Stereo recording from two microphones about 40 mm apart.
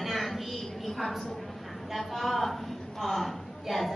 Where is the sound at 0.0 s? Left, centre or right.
Centre.